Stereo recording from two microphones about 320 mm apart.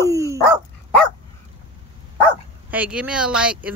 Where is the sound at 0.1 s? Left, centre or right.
Centre.